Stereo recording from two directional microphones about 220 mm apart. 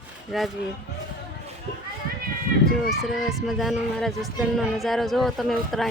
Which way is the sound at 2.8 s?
Centre (ahead or behind).